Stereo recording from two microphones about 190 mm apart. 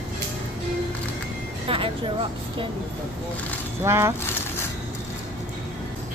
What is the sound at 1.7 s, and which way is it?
Speech, 30° right (ahead or behind).